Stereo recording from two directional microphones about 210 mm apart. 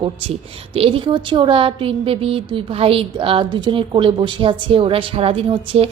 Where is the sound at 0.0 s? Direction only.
25° right (ahead or behind).